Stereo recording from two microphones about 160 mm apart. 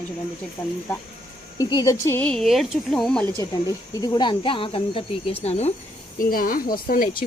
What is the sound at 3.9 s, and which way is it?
Speech, 25° left (ahead or behind).